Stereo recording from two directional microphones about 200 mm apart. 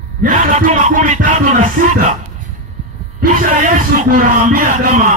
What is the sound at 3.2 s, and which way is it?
Speech, 40° right (ahead or behind).